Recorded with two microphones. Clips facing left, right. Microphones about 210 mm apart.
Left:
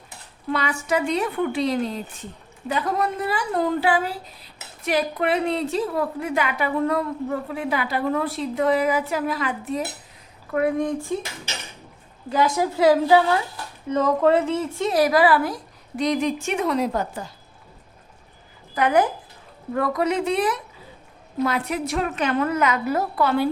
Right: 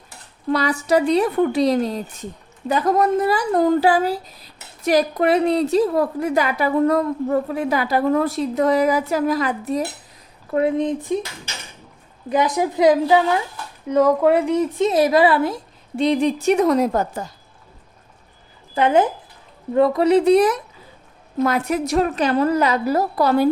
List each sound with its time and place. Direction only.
0.5 s a woman's voice: 35° right (ahead or behind)
10.5 s a woman's voice: 25° right (ahead or behind)
12.3 s a woman's voice: 20° right (ahead or behind); by 17.2 s 45° right (ahead or behind)
18.7 s a woman's voice: 25° right (ahead or behind)